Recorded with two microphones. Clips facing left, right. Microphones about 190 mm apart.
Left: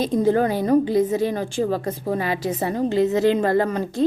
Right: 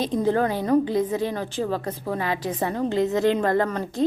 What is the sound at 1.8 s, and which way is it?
Speech, 35° left (ahead or behind).